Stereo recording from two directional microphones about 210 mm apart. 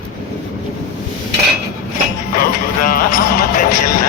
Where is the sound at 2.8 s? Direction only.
45° left (ahead or behind).